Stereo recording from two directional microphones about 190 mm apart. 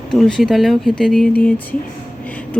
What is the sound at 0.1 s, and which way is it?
Speech, centre (ahead or behind).